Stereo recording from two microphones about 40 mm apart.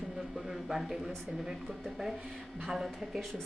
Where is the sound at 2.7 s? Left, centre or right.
Centre.